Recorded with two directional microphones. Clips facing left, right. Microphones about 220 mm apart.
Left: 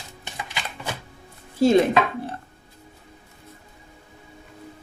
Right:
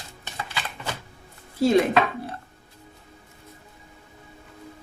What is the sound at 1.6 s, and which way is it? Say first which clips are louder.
Chopping: left 2 dB; 25° left (ahead or behind).